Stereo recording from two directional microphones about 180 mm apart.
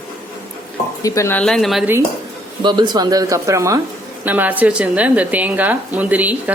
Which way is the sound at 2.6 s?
25° right (ahead or behind).